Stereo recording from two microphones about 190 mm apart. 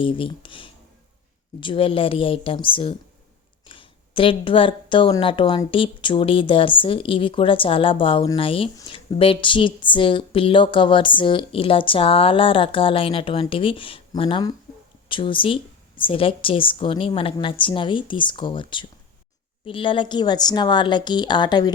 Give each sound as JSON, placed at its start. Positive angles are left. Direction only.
{"t": 0.0, "sound": "speech", "side_deg": 25}